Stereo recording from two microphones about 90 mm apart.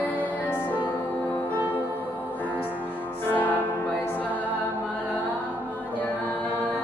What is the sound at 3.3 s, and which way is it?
Music, 20° left (ahead or behind).